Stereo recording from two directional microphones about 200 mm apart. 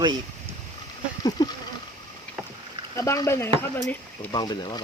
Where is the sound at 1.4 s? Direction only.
20° left (ahead or behind).